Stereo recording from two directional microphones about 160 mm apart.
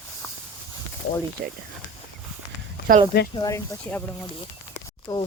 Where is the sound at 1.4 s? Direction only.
65° right (ahead or behind).